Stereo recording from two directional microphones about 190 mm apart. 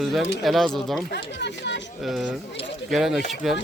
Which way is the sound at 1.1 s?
65° left (ahead or behind).